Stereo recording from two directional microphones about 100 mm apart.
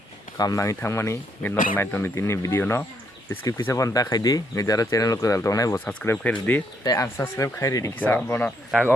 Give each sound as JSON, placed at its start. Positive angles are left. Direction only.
{"t": 0.3, "sound": "speech", "side_deg": 35}
{"t": 5.7, "sound": "speech", "side_deg": 15}
{"t": 6.8, "sound": "speech", "side_deg": 35}
{"t": 7.9, "sound": "speech", "side_deg": 20}